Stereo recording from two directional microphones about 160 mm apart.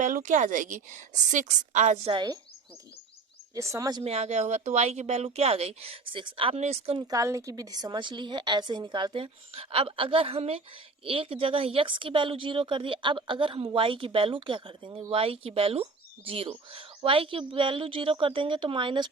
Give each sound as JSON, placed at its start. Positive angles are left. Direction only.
{"t": 0.0, "sound": "a woman's voice", "side_deg": -50}
{"t": 2.1, "sound": "a woman's voice", "side_deg": -30}
{"t": 3.5, "sound": "a woman's voice", "side_deg": -20}
{"t": 4.0, "sound": "speech", "side_deg": -40}
{"t": 7.1, "sound": "a woman's voice", "side_deg": -20}